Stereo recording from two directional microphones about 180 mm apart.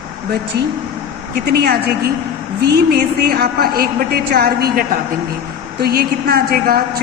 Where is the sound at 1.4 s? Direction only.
60° right (ahead or behind).